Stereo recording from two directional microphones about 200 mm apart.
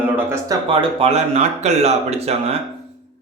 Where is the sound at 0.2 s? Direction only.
10° right (ahead or behind).